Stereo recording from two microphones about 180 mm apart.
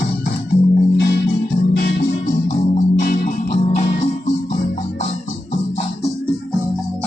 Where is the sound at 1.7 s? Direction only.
55° left (ahead or behind).